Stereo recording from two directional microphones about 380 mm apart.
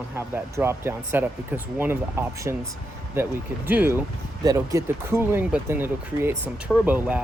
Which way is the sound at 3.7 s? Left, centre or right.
Centre.